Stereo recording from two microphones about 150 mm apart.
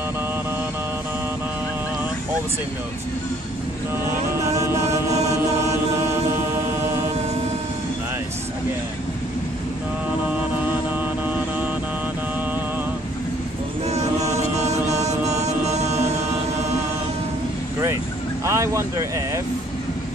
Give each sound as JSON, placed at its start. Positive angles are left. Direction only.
{"t": 4.5, "sound": "chant", "side_deg": -20}
{"t": 11.2, "sound": "vehicle", "side_deg": -10}
{"t": 13.8, "sound": "music", "side_deg": -45}
{"t": 18.4, "sound": "speech", "side_deg": -20}